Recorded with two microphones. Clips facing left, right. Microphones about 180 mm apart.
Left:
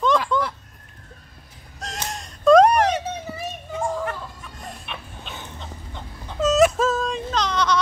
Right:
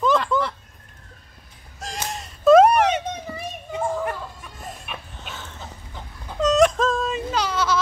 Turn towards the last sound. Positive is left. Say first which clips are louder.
# left 1 dB
turn(degrees=-5)  # may be behind; listen again after turning